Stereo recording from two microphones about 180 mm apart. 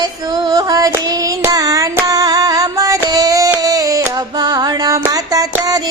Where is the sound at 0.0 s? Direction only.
20° right (ahead or behind).